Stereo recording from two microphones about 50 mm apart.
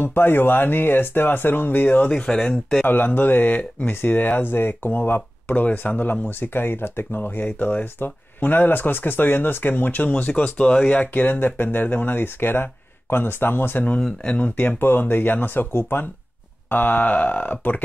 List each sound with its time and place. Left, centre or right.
0.0 s speech: left
2.0 s speech: left
2.9 s speech: left
14.2 s speech: left
14.6 s speech: left
16.6 s speech: left